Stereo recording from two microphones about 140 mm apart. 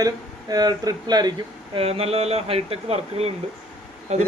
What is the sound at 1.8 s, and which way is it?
Speech, 45° right (ahead or behind).